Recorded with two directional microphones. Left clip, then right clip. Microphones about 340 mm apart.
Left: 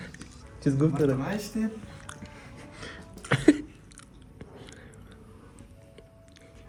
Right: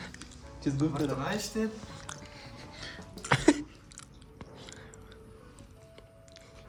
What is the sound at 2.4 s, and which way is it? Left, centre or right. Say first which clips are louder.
Music: left 1 dB; centre.